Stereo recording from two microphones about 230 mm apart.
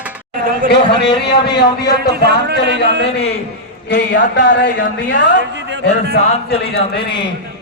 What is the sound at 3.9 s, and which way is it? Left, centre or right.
Speech, left.